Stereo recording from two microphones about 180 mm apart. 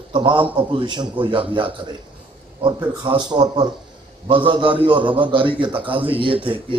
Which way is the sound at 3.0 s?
25° right (ahead or behind).